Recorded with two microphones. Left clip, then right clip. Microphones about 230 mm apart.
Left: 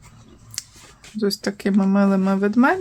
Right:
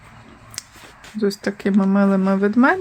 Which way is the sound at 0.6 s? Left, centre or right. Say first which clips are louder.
Left 1 dB; centre.